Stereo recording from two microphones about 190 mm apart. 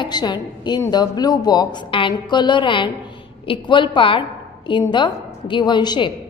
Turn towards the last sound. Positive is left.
turn(degrees=25)  # may be behind; listen again after turning